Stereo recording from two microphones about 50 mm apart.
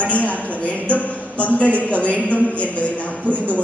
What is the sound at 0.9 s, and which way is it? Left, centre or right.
A man's voice, left.